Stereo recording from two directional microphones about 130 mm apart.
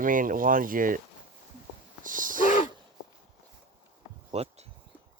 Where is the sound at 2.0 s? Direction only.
90° right.